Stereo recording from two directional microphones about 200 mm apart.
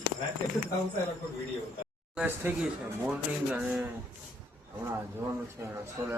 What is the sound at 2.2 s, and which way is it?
Speech, 10° right (ahead or behind).